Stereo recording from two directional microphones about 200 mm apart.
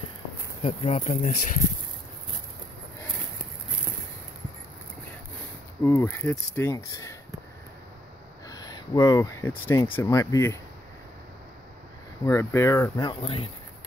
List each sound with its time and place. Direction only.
0.6 s speech: 30° left (ahead or behind)
5.9 s speech: 15° left (ahead or behind)
8.5 s speech: 20° left (ahead or behind)
12.3 s speech: 15° left (ahead or behind)
13.2 s speech: 30° left (ahead or behind)